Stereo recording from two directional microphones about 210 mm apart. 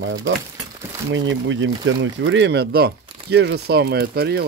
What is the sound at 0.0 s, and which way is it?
Speech, 60° right (ahead or behind).